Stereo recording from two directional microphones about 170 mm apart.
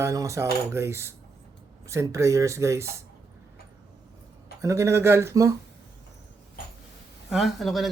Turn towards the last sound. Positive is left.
turn(degrees=0)  # may be behind; listen again after turning